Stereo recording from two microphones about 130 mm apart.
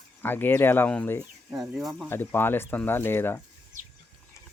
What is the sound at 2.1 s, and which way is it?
Speech, 15° left (ahead or behind).